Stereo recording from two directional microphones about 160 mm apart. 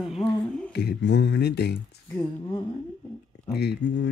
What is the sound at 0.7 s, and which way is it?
Speech, 90° left.